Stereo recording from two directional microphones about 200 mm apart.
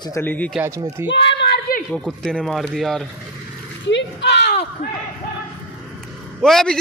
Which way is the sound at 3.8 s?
60° left (ahead or behind).